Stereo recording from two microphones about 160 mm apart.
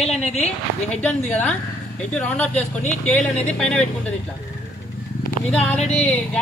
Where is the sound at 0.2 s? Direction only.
40° left (ahead or behind).